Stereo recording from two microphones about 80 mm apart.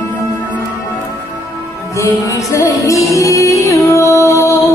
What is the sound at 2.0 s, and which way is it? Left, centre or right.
Music, left.